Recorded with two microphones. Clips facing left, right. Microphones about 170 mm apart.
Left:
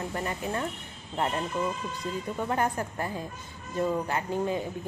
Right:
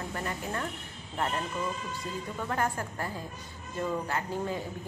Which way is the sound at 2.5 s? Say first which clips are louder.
Left 2 dB; 20° left (ahead or behind).